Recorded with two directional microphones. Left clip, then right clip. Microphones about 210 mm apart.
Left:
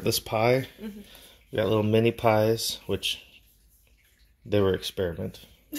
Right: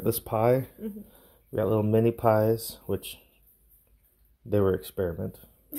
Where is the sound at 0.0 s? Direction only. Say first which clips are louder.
Left 1 dB; 10° right (ahead or behind).